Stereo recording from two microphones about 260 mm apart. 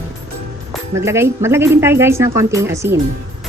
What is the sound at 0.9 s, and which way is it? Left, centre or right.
Speech, centre.